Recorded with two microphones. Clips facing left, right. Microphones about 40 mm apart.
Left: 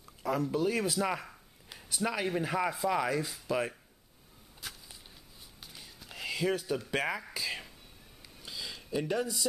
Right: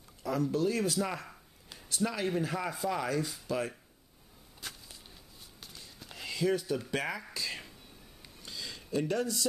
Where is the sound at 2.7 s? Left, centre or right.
Centre.